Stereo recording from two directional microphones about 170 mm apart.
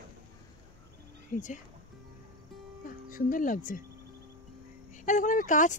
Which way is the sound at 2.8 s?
55° left (ahead or behind).